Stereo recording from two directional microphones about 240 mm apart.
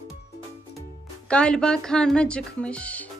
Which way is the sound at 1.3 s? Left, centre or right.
Centre.